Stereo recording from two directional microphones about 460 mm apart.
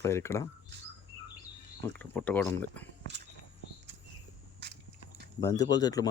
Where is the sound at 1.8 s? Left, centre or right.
Centre.